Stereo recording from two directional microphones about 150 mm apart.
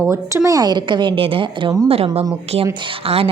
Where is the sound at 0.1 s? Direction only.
20° right (ahead or behind).